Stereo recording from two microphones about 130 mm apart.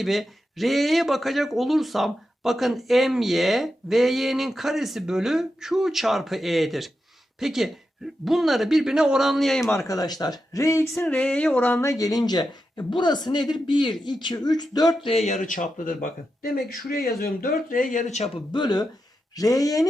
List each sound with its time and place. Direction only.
0.0 s speech: centre (ahead or behind)
9.7 s speech: 25° left (ahead or behind)
11.0 s a sound: 5° left (ahead or behind)
11.7 s speech: 25° left (ahead or behind)
15.1 s speech: 60° left (ahead or behind)
18.5 s speech: 35° left (ahead or behind)